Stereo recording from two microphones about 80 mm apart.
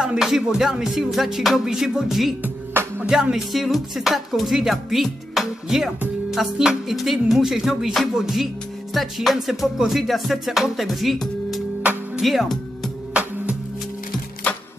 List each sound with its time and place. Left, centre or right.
0.0 s music: centre
2.4 s music: right
3.1 s music: centre
13.1 s music: centre